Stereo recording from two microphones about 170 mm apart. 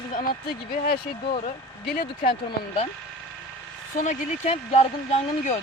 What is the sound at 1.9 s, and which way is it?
Speech, 65° left (ahead or behind).